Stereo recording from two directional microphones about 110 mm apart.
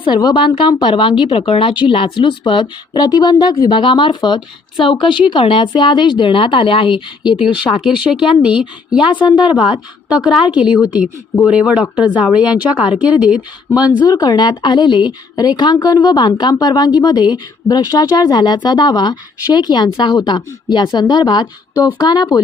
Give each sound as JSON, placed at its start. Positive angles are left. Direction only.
{"t": 0.0, "sound": "speech", "side_deg": 45}
{"t": 7.4, "sound": "speech", "side_deg": -5}
{"t": 14.0, "sound": "speech", "side_deg": 35}